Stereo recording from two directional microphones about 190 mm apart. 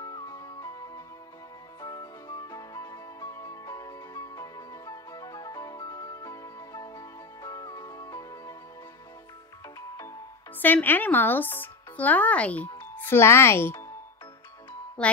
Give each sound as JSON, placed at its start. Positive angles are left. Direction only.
{"t": 0.0, "sound": "music", "side_deg": 20}
{"t": 9.8, "sound": "music", "side_deg": 15}
{"t": 10.6, "sound": "speech", "side_deg": 10}